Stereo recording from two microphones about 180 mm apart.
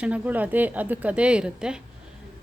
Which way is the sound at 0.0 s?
10° right (ahead or behind).